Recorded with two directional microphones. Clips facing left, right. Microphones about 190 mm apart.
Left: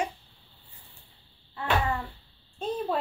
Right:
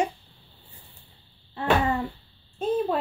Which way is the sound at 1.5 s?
20° right (ahead or behind).